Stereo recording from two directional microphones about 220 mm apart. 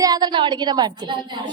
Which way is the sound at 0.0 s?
20° right (ahead or behind).